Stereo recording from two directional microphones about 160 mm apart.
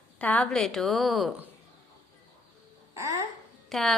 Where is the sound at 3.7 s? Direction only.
Centre (ahead or behind).